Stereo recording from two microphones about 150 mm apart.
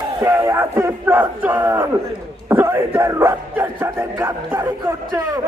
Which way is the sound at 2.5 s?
15° right (ahead or behind).